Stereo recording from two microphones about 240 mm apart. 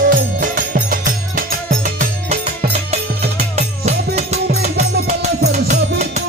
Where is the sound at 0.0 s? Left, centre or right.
Right.